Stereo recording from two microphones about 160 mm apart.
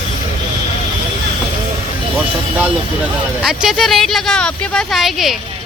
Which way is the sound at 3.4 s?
5° right (ahead or behind).